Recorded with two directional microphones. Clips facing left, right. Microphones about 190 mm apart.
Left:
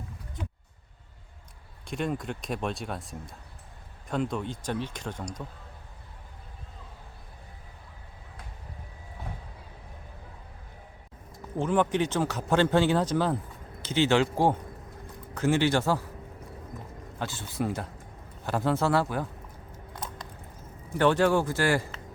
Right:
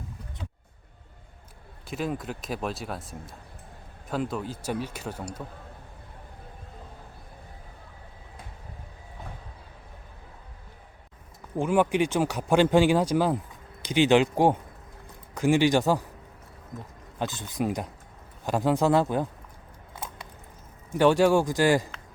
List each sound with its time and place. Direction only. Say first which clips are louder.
1.9 s speech: even; centre (ahead or behind)
11.5 s speech: right 2 dB; 10° right (ahead or behind)
17.2 s speech: right 3 dB; 15° right (ahead or behind)
21.0 s speech: right 3 dB; 10° right (ahead or behind)